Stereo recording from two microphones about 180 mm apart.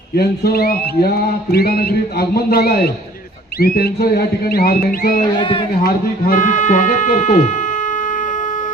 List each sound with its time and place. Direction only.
0.2 s a sound: 60° left (ahead or behind)
5.4 s a man's voice: 30° left (ahead or behind)
5.8 s speech: 50° left (ahead or behind)